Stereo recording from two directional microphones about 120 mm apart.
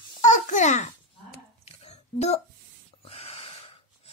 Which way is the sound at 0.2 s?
90° left.